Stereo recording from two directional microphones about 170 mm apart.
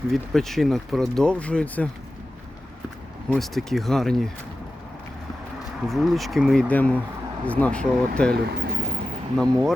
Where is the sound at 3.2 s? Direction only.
Centre (ahead or behind).